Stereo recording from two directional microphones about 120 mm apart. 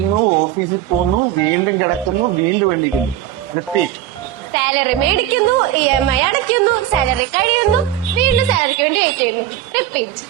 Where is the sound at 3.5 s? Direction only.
15° right (ahead or behind).